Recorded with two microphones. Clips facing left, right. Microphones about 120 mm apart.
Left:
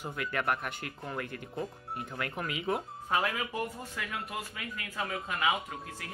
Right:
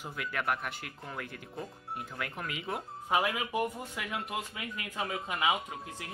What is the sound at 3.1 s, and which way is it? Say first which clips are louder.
Speech: right 1 dB; 15° right (ahead or behind).